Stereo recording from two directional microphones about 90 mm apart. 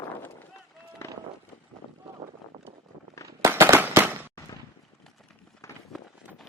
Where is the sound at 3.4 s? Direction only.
25° right (ahead or behind).